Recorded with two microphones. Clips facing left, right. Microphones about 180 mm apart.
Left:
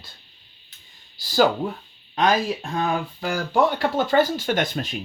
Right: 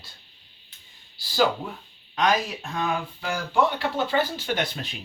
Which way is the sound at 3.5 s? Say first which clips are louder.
Left 3 dB; 45° left (ahead or behind).